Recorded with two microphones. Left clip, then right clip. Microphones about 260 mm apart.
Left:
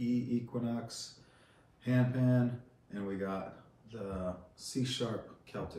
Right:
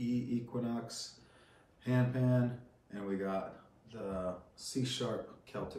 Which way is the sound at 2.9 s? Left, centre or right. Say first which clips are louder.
Right 1 dB; centre.